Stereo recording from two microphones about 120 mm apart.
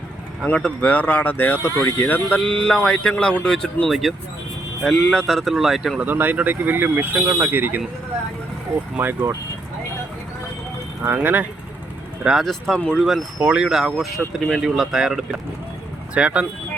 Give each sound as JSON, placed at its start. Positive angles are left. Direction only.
{"t": 0.4, "sound": "speech", "side_deg": 5}
{"t": 2.4, "sound": "music", "side_deg": 5}
{"t": 6.1, "sound": "speech", "side_deg": -15}
{"t": 9.0, "sound": "speech", "side_deg": -20}
{"t": 11.0, "sound": "speech", "side_deg": -15}
{"t": 12.2, "sound": "music", "side_deg": 0}
{"t": 13.1, "sound": "music", "side_deg": -5}
{"t": 16.1, "sound": "speech", "side_deg": -10}